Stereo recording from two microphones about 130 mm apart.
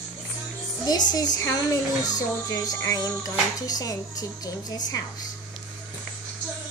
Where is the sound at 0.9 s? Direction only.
30° left (ahead or behind).